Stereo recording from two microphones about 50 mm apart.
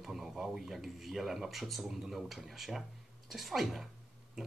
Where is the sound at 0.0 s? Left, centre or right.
Centre.